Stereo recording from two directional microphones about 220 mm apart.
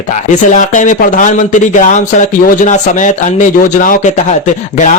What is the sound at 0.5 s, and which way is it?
Speech, 35° left (ahead or behind).